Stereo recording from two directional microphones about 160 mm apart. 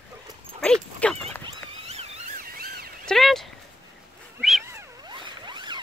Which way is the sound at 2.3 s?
65° right (ahead or behind).